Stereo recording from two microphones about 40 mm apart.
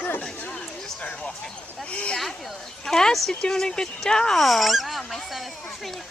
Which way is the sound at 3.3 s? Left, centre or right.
Centre.